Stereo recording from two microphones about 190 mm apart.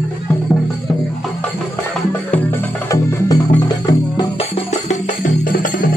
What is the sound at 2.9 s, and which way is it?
Music, 15° left (ahead or behind).